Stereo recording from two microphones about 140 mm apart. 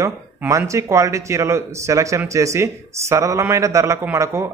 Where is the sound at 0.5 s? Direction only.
20° right (ahead or behind).